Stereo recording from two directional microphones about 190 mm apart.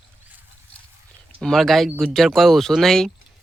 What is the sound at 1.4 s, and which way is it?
Speech, centre (ahead or behind).